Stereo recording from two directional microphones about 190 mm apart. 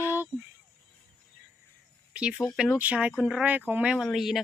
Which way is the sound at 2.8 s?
5° right (ahead or behind).